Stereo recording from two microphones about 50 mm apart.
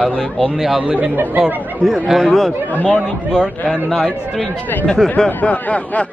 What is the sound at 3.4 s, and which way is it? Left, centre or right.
Speech, centre.